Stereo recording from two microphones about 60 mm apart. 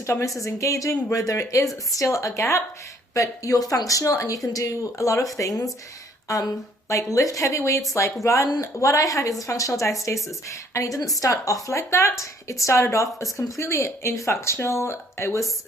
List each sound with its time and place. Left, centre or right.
0.0 s speech: left
0.4 s speech: left
3.2 s speech: left